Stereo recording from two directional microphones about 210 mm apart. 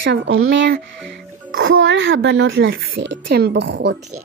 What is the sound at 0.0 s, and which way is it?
Speech, 60° right (ahead or behind).